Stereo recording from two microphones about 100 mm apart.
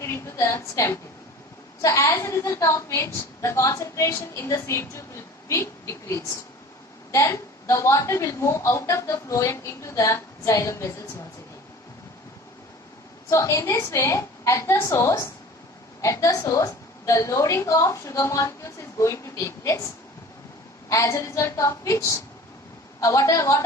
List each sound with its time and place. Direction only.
0.0 s a woman's voice: 25° left (ahead or behind)
13.3 s a woman's voice: 30° left (ahead or behind)
20.9 s a woman's voice: 30° left (ahead or behind)